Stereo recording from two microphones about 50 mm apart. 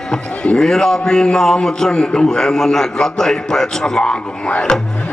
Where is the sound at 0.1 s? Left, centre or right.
Centre.